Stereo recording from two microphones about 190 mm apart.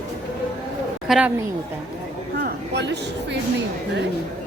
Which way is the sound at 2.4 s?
60° right (ahead or behind).